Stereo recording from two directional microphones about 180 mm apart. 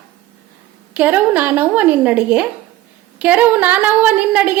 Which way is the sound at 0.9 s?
10° right (ahead or behind).